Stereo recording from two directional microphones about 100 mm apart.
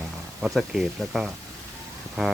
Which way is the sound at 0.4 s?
5° right (ahead or behind).